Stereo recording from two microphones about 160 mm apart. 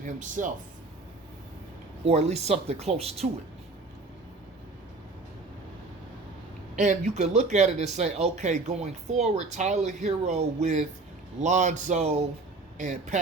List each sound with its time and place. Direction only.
0.0 s speech: 55° right (ahead or behind)
2.0 s speech: 45° right (ahead or behind)
6.7 s speech: 50° right (ahead or behind)